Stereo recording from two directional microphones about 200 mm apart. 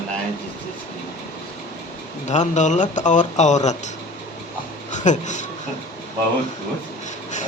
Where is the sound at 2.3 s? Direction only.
35° left (ahead or behind).